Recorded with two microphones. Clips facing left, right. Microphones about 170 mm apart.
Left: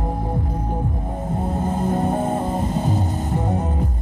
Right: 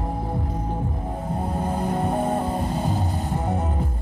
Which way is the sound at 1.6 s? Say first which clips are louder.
Left 3 dB; 20° left (ahead or behind).